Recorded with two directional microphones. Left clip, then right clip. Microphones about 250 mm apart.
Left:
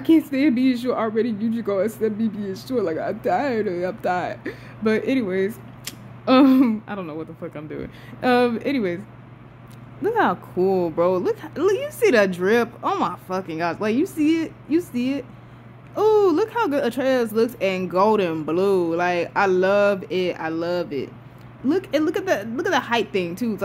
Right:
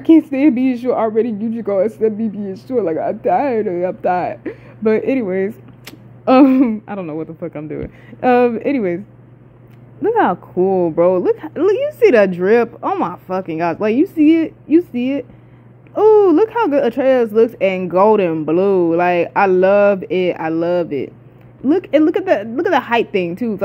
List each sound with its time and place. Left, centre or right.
0.0 s speech: centre
10.0 s speech: centre